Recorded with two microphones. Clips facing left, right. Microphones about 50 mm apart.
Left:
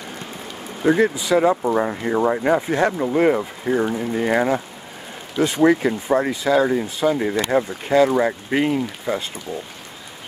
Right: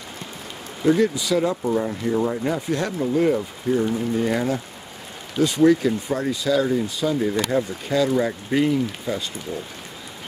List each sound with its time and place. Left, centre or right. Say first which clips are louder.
0.8 s speech: left 2 dB; left